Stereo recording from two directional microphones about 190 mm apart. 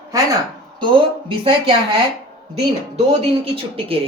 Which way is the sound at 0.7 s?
25° right (ahead or behind).